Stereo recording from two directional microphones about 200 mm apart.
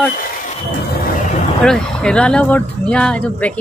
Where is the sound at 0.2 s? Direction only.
40° left (ahead or behind).